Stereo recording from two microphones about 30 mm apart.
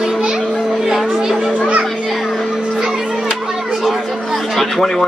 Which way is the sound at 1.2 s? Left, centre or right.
Centre.